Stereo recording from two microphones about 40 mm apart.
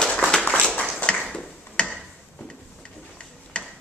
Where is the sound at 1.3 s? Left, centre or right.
Left.